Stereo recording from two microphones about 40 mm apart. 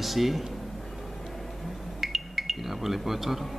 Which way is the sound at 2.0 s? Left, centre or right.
Centre.